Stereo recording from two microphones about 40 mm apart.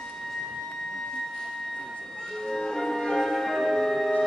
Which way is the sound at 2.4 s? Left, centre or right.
Centre.